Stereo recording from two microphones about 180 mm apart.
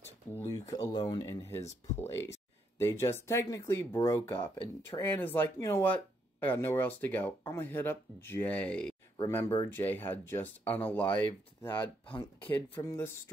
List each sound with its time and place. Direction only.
0.3 s speech: 15° left (ahead or behind)